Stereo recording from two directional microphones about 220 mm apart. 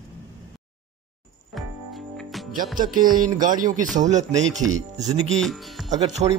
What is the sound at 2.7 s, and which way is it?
Speech, 40° right (ahead or behind).